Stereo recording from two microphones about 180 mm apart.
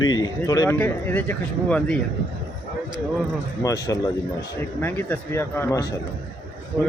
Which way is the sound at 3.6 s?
20° left (ahead or behind).